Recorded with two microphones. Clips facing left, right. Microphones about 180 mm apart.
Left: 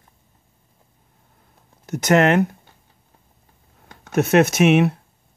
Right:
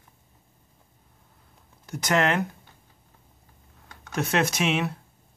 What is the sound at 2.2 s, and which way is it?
Speech, 65° left (ahead or behind).